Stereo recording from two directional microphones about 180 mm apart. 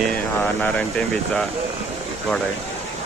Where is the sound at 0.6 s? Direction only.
5° left (ahead or behind).